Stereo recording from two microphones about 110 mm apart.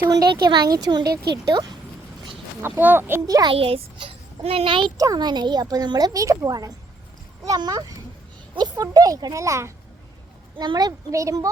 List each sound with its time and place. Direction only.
0.1 s a woman's voice: 40° right (ahead or behind)
2.6 s speech: 20° right (ahead or behind)
3.2 s a woman's voice: 35° right (ahead or behind)
3.5 s a child's voice: 60° right (ahead or behind)
4.9 s a woman's voice: 35° right (ahead or behind)
10.6 s a woman's voice: 40° right (ahead or behind)